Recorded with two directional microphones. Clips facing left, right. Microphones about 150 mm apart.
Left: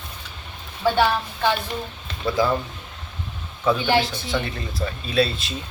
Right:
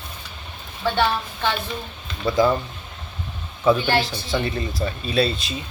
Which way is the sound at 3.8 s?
15° left (ahead or behind).